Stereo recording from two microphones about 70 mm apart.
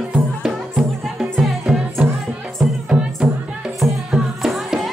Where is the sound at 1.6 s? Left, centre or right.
Centre.